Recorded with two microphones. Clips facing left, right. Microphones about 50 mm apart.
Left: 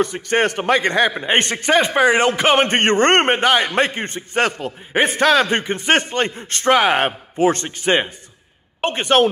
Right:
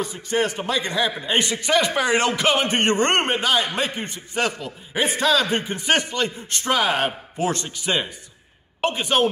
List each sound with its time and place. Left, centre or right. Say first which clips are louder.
0.0 s a man's voice: left 5 dB; left
1.7 s speech: left 5 dB; left
2.6 s a man's voice: left 5 dB; left
9.0 s speech: left 6 dB; left